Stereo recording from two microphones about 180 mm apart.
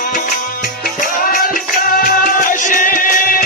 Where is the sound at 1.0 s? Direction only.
50° left (ahead or behind).